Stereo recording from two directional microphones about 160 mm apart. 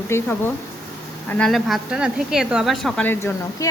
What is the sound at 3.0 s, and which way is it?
Speech, 15° left (ahead or behind).